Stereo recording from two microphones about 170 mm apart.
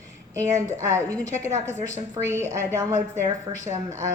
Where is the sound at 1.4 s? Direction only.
15° right (ahead or behind).